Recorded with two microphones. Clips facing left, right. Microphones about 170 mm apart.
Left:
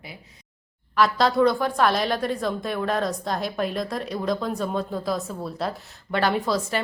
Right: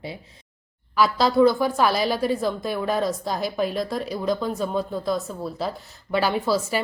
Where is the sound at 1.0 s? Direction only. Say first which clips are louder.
Right 1 dB; centre (ahead or behind).